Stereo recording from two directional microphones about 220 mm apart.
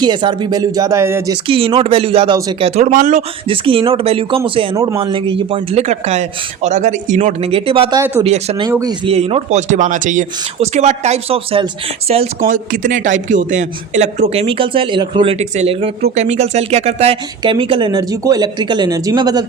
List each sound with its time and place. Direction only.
0.0 s speech: 20° right (ahead or behind)
1.5 s a man's voice: 25° right (ahead or behind)
4.7 s a man's voice: 15° right (ahead or behind)
8.2 s a man's voice: 25° right (ahead or behind)
9.1 s a man's voice: 30° right (ahead or behind)